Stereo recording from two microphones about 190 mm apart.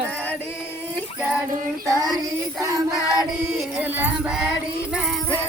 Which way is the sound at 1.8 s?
20° right (ahead or behind).